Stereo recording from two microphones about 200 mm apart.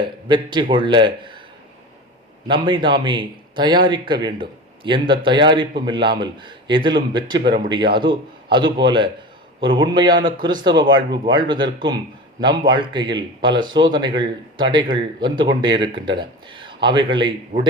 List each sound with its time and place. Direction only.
0.3 s a man's voice: 25° right (ahead or behind)
2.5 s a man's voice: 25° right (ahead or behind)
17.5 s speech: 40° right (ahead or behind)